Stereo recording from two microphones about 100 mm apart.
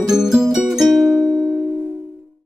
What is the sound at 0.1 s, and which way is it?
Music, 5° right (ahead or behind).